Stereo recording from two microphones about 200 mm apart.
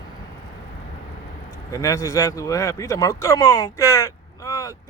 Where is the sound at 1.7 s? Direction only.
15° left (ahead or behind).